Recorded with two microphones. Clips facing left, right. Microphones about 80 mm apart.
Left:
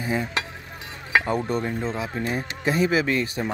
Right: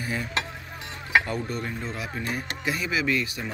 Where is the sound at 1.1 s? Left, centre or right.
Left.